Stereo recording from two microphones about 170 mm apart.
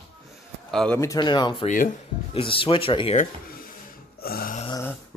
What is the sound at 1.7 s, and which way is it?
Speech, 50° left (ahead or behind).